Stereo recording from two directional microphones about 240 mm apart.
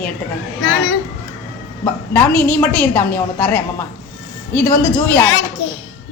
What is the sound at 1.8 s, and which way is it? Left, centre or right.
A woman's voice, centre.